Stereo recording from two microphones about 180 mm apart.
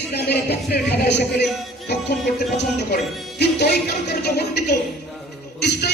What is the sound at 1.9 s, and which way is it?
Music, 65° left (ahead or behind).